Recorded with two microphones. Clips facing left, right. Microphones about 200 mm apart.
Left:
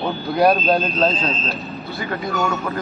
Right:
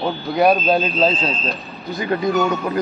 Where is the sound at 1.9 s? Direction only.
20° right (ahead or behind).